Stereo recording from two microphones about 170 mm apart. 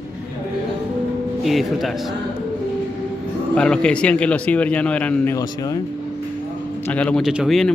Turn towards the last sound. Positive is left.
turn(degrees=0)  # may be behind; listen again after turning